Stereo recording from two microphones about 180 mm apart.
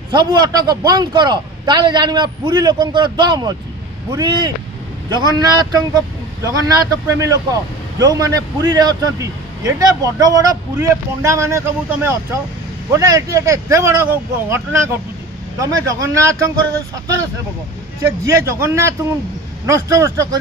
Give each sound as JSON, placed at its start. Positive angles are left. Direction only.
{"t": 0.1, "sound": "a man's voice", "side_deg": -25}
{"t": 18.0, "sound": "speech", "side_deg": -15}